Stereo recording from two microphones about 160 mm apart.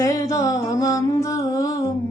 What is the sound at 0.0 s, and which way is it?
Mantra, 20° left (ahead or behind).